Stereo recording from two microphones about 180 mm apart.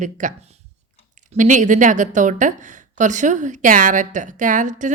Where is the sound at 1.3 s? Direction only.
45° right (ahead or behind).